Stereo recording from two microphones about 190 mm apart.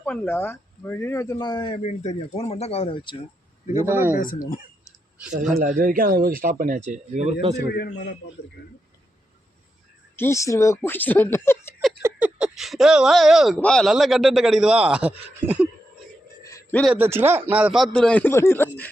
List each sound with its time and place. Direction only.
0.0 s speech: 10° left (ahead or behind); by 3.2 s 25° left (ahead or behind)
3.8 s speech: 10° right (ahead or behind)
4.1 s speech: 45° left (ahead or behind)
5.5 s speech: 45° right (ahead or behind)
7.7 s a man's voice: 55° left (ahead or behind)
10.2 s speech: 15° left (ahead or behind)
12.0 s speech: 5° right (ahead or behind)
16.4 s a sound: 15° left (ahead or behind)
16.8 s speech: 10° right (ahead or behind); by 18.9 s 10° left (ahead or behind)